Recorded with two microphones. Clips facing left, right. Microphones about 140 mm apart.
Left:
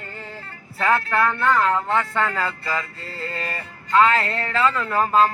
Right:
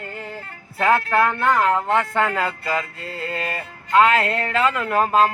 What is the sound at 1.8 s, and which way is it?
Speech, 45° right (ahead or behind).